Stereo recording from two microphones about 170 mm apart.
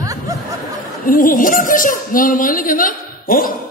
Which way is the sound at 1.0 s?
55° left (ahead or behind).